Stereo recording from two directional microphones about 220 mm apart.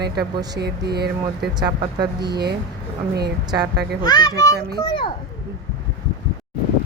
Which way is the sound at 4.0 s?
20° left (ahead or behind).